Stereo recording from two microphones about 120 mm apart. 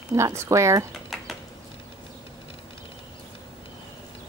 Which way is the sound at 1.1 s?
Centre (ahead or behind).